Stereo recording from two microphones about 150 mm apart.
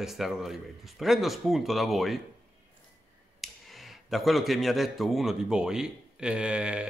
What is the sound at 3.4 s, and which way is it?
Speech, centre (ahead or behind).